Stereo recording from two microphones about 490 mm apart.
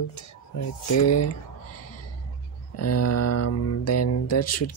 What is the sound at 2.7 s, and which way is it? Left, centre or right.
Speech, left.